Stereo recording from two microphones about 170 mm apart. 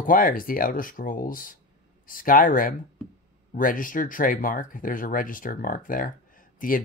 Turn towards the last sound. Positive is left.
turn(degrees=55)  # may be behind; listen again after turning